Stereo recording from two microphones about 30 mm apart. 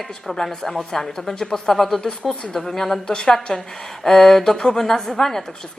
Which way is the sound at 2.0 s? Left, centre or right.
Left.